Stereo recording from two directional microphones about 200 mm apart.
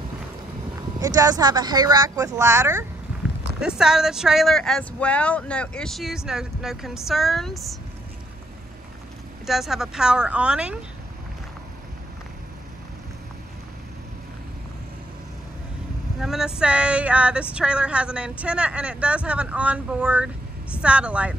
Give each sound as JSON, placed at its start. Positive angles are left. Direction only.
{"t": 0.9, "sound": "speech", "side_deg": -20}
{"t": 3.6, "sound": "speech", "side_deg": -5}
{"t": 9.5, "sound": "speech", "side_deg": 0}
{"t": 16.2, "sound": "speech", "side_deg": -5}